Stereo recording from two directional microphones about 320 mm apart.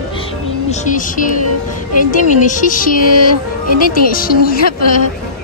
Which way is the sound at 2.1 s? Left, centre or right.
Left.